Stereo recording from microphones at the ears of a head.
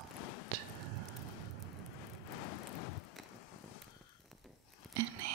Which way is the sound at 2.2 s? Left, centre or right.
Left.